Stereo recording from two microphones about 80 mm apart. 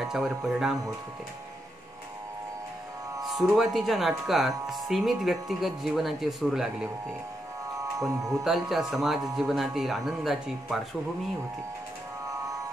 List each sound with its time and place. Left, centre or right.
0.0 s speech: centre
3.3 s speech: centre
8.1 s speech: right
8.5 s speech: centre
12.3 s music: right